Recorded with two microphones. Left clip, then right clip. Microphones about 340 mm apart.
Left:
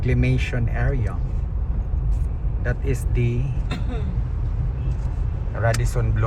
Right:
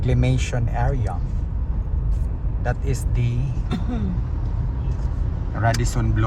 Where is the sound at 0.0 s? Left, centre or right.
Centre.